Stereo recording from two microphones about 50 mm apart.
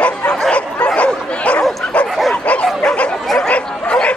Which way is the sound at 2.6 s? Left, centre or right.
Centre.